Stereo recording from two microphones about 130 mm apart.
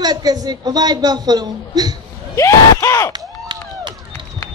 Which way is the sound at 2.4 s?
20° left (ahead or behind).